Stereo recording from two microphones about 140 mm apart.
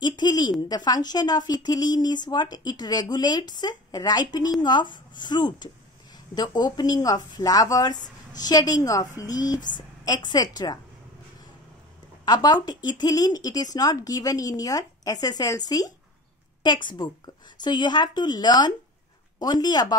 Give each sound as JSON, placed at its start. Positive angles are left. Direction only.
{"t": 0.0, "sound": "speech", "side_deg": 30}
{"t": 12.3, "sound": "speech", "side_deg": 30}